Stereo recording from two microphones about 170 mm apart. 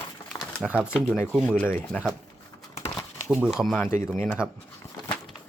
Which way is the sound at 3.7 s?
10° left (ahead or behind).